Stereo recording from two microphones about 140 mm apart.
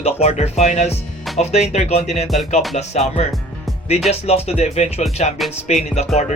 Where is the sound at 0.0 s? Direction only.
50° left (ahead or behind).